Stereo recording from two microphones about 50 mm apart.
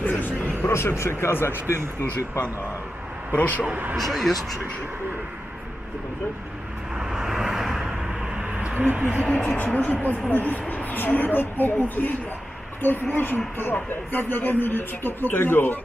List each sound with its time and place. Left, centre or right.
0.0 s music: left
0.6 s speech: left
1.7 s speech: left
3.3 s speech: left
3.9 s speech: centre
6.9 s vehicle: centre
8.6 s a sound: right
9.4 s speech: left